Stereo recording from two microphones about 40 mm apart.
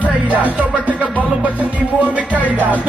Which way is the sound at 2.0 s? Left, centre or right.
Right.